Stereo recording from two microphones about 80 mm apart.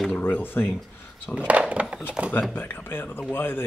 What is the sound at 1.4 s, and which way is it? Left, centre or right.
Speech, centre.